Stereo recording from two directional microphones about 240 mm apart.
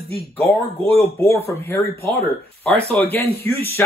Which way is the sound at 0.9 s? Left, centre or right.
Centre.